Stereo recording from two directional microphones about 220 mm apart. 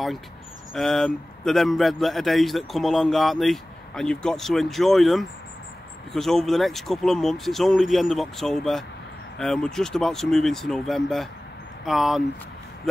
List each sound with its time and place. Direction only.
0.7 s speech: centre (ahead or behind)